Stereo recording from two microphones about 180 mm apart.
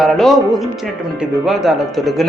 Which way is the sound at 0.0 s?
Centre (ahead or behind).